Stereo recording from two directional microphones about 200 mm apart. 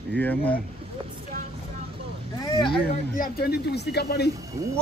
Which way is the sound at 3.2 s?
50° left (ahead or behind).